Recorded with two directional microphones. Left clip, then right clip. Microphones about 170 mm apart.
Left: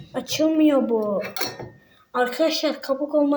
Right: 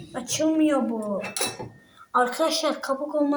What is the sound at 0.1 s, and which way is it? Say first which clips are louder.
Speech: left 3 dB; 25° left (ahead or behind).